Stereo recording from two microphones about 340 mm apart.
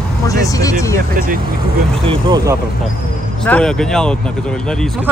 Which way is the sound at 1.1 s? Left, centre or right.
Right.